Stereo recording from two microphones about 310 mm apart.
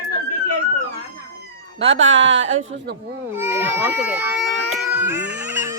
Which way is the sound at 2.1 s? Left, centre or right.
Right.